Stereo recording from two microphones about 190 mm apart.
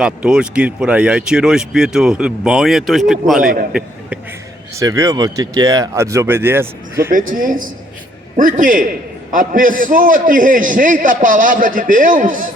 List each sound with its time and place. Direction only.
0.0 s speech: 5° right (ahead or behind)
3.4 s a man's voice: 50° right (ahead or behind)
3.7 s a sound: 5° right (ahead or behind)
4.7 s speech: 15° right (ahead or behind)
7.1 s a man's voice: 45° right (ahead or behind)